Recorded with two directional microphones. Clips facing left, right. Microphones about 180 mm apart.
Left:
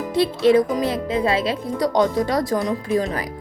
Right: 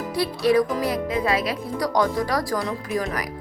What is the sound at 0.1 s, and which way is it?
A woman's voice, 25° left (ahead or behind).